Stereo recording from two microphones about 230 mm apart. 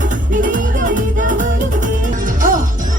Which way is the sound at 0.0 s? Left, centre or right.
Right.